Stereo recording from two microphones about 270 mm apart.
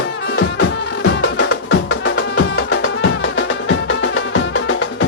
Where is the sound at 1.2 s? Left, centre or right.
Left.